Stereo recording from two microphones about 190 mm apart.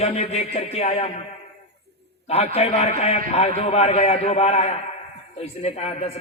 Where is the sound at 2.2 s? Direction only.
30° left (ahead or behind).